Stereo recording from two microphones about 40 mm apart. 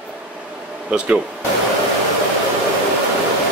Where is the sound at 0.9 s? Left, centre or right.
Right.